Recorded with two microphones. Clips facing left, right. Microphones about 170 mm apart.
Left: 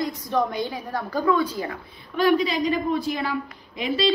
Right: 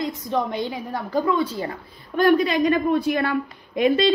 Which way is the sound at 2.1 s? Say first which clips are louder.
Right 3 dB; 55° right (ahead or behind).